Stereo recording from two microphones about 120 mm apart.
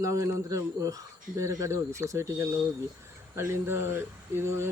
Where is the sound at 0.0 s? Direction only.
30° right (ahead or behind).